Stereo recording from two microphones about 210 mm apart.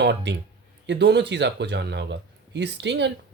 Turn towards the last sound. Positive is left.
turn(degrees=-55)  # may be behind; listen again after turning